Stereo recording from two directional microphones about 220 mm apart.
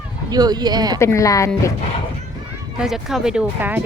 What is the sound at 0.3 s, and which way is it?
Speech, 20° right (ahead or behind).